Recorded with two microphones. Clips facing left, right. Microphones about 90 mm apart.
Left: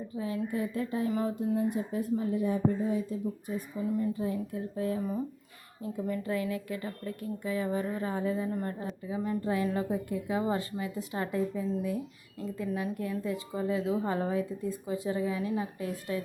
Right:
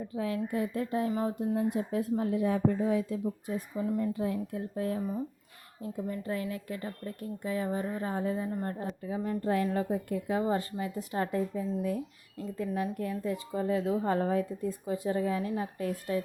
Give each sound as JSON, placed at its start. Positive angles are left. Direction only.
{"t": 0.1, "sound": "a woman's voice", "side_deg": -75}
{"t": 0.3, "sound": "a woman's voice", "side_deg": -55}
{"t": 3.8, "sound": "speech", "side_deg": -60}
{"t": 6.1, "sound": "a woman's voice", "side_deg": -35}